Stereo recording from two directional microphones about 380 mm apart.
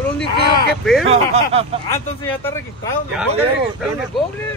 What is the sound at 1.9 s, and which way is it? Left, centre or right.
Speech, centre.